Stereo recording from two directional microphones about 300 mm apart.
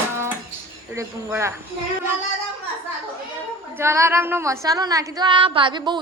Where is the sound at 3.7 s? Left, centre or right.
Centre.